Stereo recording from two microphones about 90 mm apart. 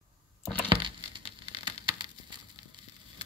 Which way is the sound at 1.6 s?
65° right (ahead or behind).